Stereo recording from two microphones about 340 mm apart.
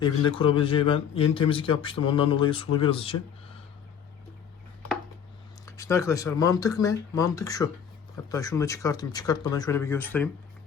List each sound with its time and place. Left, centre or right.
0.0 s speech: centre
5.6 s speech: centre